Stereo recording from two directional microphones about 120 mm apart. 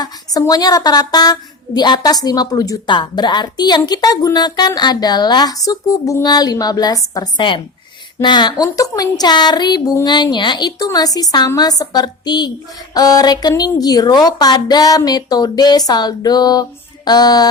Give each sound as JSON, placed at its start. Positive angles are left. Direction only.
{"t": 0.0, "sound": "a woman's voice", "side_deg": 30}